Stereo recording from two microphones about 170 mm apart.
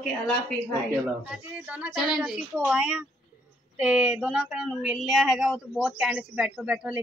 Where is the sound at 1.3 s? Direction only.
5° right (ahead or behind).